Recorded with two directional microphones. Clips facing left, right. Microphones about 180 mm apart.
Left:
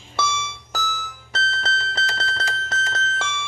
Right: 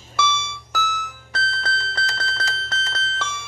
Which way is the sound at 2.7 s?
45° left (ahead or behind).